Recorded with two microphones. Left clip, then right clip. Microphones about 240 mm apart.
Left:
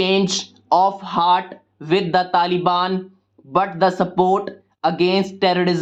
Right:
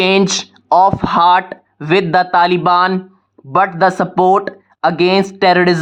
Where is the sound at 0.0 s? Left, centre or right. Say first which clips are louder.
Right 6 dB; right.